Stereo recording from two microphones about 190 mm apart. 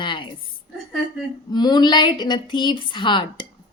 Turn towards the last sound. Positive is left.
turn(degrees=25)  # may be behind; listen again after turning